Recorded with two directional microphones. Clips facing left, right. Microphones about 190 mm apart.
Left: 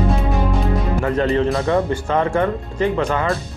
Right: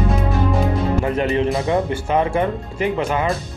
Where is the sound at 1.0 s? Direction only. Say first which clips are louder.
Left 5 dB; 15° right (ahead or behind).